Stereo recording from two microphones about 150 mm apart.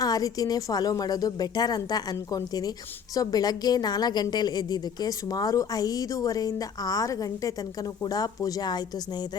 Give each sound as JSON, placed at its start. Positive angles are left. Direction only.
{"t": 0.0, "sound": "a woman's voice", "side_deg": 25}